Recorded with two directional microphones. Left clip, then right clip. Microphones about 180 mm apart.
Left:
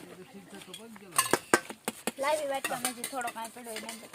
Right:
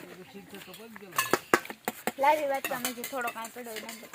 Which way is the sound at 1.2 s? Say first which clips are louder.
Right 1 dB; 10° left (ahead or behind).